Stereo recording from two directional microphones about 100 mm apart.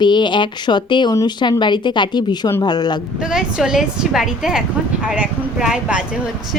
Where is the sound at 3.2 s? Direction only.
10° right (ahead or behind).